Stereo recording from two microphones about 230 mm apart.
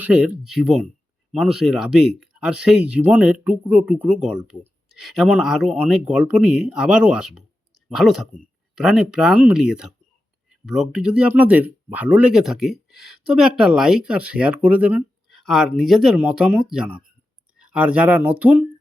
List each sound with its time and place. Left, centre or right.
0.0 s speech: centre